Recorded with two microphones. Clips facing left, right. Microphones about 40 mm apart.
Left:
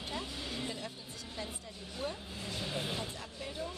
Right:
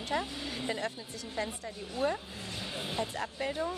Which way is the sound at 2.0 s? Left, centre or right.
Right.